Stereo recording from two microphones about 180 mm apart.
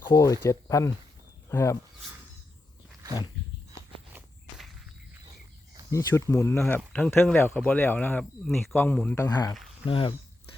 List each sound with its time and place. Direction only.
0.1 s speech: 15° left (ahead or behind)
5.9 s speech: 15° left (ahead or behind)
9.2 s speech: 20° left (ahead or behind)